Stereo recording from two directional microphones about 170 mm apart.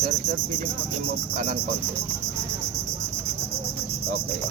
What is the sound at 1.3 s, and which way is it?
Speech, 45° right (ahead or behind).